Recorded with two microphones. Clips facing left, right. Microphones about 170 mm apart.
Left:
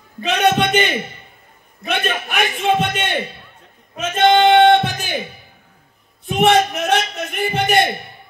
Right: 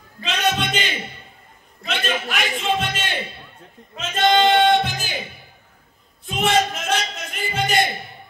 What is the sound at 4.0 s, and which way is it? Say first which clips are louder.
Music: left 4 dB; 55° left (ahead or behind).